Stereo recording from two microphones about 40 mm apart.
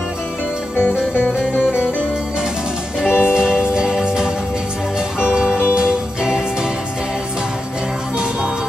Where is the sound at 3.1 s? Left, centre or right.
Left.